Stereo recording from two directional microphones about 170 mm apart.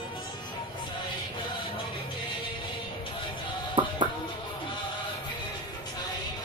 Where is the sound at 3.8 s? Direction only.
30° right (ahead or behind).